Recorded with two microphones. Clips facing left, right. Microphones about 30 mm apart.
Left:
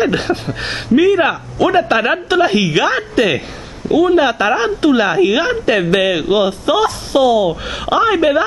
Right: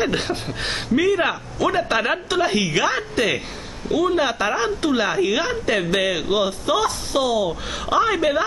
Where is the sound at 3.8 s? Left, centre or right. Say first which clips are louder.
Left 8 dB; centre; by 8.1 s left.